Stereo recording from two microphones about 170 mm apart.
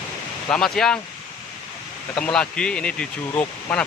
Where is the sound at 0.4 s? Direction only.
5° left (ahead or behind).